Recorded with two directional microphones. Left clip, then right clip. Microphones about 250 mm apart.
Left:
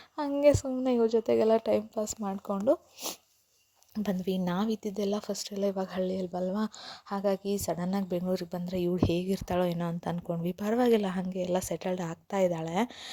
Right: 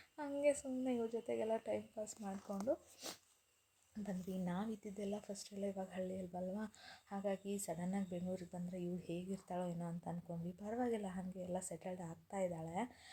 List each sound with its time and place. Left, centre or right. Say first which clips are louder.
0.2 s speech: left 13 dB; left
4.0 s speech: left 15 dB; left